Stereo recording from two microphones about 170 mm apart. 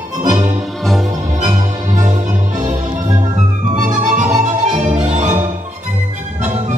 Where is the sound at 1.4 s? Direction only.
45° right (ahead or behind).